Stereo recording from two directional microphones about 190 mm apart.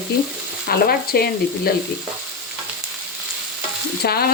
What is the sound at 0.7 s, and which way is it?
Frying, 55° left (ahead or behind).